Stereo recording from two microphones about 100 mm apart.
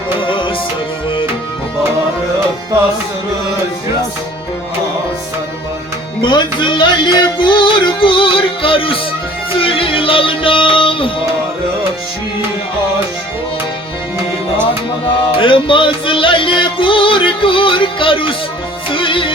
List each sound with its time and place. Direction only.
0.2 s tabla: 55° left (ahead or behind)
6.2 s music: 50° left (ahead or behind)
15.4 s music: 60° left (ahead or behind)